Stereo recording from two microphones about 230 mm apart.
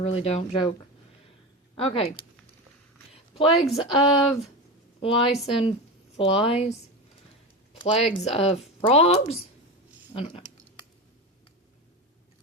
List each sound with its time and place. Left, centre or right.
0.0 s speech: left
1.7 s speech: left
3.1 s a sound: left
3.5 s speech: centre
4.9 s a woman's voice: left